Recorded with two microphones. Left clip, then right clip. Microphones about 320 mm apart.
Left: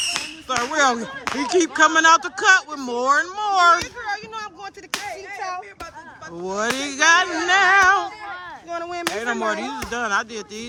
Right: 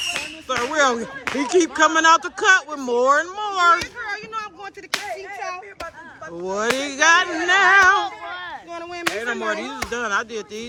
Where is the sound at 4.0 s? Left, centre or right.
Left.